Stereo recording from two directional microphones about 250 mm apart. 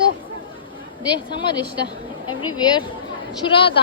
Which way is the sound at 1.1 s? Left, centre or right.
Centre.